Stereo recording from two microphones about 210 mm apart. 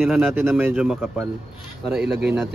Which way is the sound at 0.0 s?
Centre (ahead or behind).